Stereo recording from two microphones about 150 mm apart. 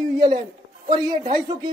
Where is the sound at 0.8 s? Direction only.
25° right (ahead or behind).